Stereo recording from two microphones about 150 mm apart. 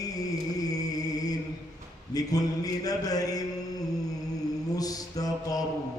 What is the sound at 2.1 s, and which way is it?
A man's voice, 25° left (ahead or behind).